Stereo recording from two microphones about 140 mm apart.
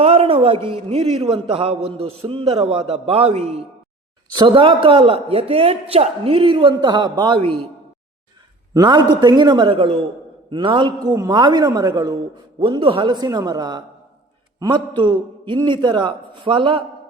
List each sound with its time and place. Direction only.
0.0 s a man's voice: 45° right (ahead or behind)
4.4 s a man's voice: 35° right (ahead or behind)
8.7 s a man's voice: 30° right (ahead or behind)